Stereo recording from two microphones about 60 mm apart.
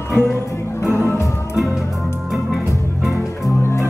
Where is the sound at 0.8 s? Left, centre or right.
Left.